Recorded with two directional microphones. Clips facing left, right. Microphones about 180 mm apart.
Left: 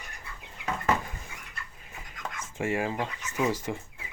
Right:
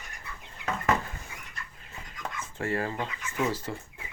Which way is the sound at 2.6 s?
10° left (ahead or behind).